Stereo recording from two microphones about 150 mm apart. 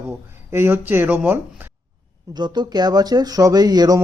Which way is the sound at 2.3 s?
30° right (ahead or behind).